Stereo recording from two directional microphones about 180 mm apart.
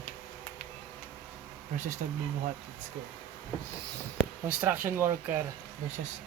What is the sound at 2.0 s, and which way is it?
Speech, 45° right (ahead or behind).